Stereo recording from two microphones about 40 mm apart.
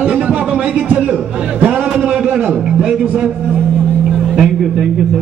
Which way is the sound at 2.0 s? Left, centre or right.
Right.